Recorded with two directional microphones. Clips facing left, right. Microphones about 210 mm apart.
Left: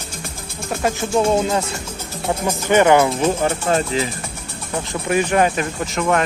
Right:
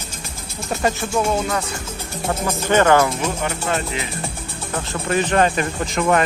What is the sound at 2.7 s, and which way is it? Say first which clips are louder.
Speech: left 2 dB; 15° left (ahead or behind).